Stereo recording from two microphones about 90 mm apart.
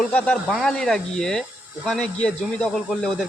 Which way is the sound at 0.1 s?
15° left (ahead or behind).